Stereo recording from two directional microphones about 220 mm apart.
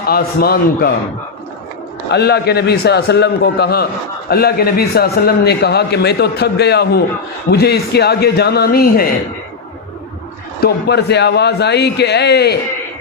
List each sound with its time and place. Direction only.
0.0 s a man's voice: 45° left (ahead or behind)
2.0 s a man's voice: 50° left (ahead or behind)
10.6 s a man's voice: 50° left (ahead or behind)